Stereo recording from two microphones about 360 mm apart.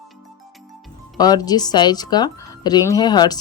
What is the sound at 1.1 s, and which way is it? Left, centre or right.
Speech, centre.